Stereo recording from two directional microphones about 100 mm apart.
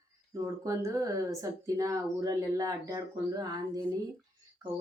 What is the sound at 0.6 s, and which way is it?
Speech, 35° right (ahead or behind).